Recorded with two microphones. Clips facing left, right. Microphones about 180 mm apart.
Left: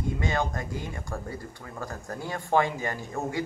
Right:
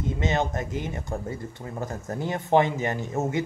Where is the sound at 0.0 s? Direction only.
20° right (ahead or behind).